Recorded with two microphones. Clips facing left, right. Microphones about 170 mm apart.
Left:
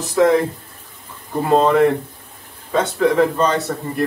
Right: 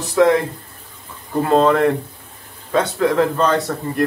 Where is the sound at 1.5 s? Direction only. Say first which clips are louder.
Left 1 dB; 5° left (ahead or behind).